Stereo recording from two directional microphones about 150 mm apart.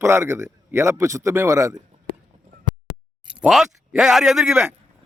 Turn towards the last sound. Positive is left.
turn(degrees=0)  # may be behind; listen again after turning